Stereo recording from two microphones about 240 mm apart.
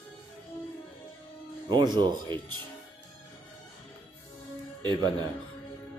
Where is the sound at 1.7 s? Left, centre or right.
Centre.